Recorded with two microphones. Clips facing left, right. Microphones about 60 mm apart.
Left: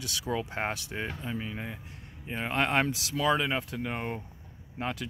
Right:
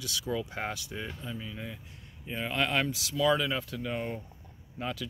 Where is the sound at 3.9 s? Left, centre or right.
Left.